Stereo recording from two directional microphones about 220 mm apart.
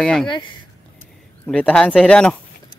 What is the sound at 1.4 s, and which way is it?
Speech, 5° left (ahead or behind).